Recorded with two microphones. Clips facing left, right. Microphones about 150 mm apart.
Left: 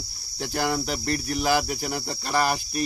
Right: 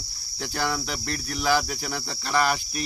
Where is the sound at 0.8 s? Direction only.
40° left (ahead or behind).